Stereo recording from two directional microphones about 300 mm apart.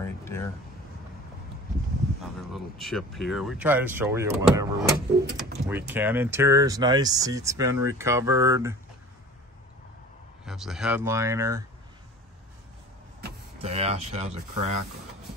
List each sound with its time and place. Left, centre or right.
0.0 s a sound: centre
2.5 s speech: centre
10.4 s speech: centre
13.6 s speech: centre